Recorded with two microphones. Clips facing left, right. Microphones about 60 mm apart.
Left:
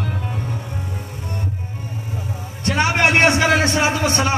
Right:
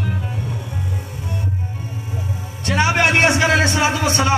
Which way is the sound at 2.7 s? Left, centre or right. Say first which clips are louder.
Even; left.